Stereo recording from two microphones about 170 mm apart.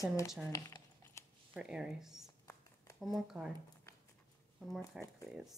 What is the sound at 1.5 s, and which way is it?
Speech, 5° right (ahead or behind).